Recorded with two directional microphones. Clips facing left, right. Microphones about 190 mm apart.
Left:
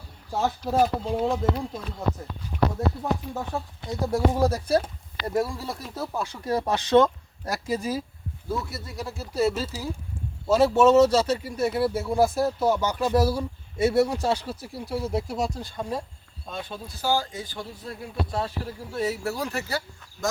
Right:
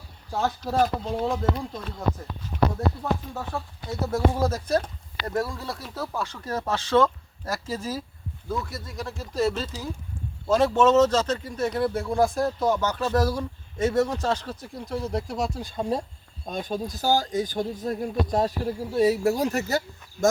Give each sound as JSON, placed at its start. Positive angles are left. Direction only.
{"t": 0.3, "sound": "speech", "side_deg": 5}
{"t": 3.0, "sound": "speech", "side_deg": 20}
{"t": 15.6, "sound": "speech", "side_deg": -20}
{"t": 16.5, "sound": "speech", "side_deg": -40}